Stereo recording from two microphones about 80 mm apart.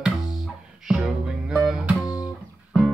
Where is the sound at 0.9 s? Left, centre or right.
Centre.